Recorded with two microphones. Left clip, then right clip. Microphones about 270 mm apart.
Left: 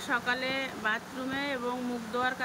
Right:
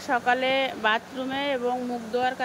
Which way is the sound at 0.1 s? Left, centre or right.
Centre.